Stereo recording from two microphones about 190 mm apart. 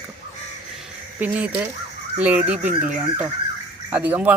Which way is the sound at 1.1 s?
10° right (ahead or behind).